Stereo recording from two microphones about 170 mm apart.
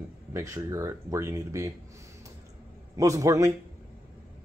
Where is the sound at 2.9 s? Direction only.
20° right (ahead or behind).